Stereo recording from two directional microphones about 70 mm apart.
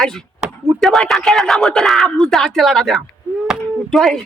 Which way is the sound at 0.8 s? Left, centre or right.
Centre.